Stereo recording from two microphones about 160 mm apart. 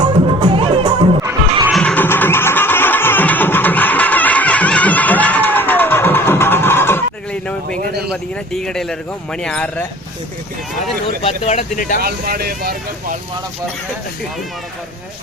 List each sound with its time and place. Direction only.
0.0 s music: 30° right (ahead or behind)
1.7 s music: 5° left (ahead or behind)
8.1 s speech: 5° left (ahead or behind)
11.2 s speech: 40° left (ahead or behind)
11.9 s speech: 65° right (ahead or behind)